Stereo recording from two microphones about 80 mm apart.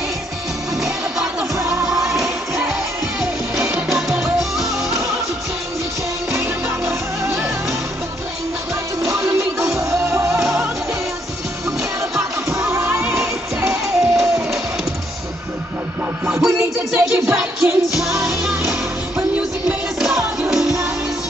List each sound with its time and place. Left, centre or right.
0.7 s music: centre
9.0 s music: centre
9.8 s music: right
12.8 s music: centre
16.4 s music: centre